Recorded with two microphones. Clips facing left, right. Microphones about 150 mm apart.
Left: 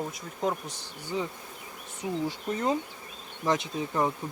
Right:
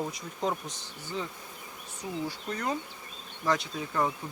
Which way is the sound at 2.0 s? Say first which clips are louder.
Left 4 dB; 20° left (ahead or behind).